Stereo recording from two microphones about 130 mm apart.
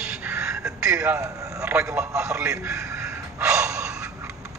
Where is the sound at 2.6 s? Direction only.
25° right (ahead or behind).